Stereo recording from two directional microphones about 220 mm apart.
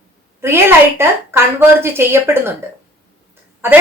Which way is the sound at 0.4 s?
10° right (ahead or behind).